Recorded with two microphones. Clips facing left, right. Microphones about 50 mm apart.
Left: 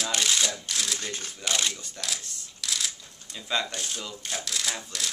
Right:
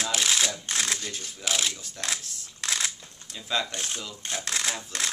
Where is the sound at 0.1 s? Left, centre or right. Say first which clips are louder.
Even; centre.